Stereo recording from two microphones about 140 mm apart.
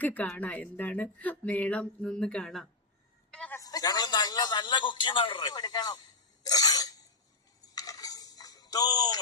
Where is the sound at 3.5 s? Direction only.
25° left (ahead or behind).